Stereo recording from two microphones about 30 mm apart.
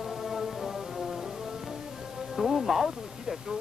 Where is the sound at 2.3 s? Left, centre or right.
Centre.